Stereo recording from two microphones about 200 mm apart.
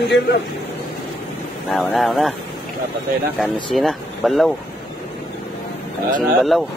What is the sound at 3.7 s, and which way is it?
Speech, centre (ahead or behind).